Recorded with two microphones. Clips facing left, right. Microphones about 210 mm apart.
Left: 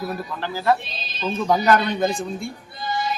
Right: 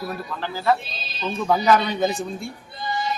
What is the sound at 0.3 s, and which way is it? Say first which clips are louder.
Speech: left 1 dB; 5° left (ahead or behind).